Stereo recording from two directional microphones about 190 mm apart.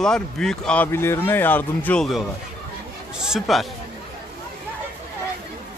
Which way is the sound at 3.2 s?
Centre (ahead or behind).